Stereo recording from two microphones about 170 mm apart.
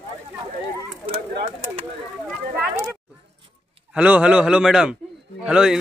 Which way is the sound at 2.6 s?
15° right (ahead or behind).